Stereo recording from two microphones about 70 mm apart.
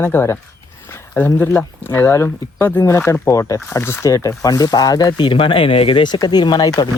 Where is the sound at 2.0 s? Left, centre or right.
Left.